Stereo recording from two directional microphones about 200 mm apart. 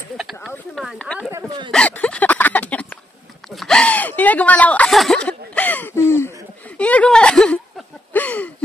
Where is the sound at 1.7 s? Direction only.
5° left (ahead or behind).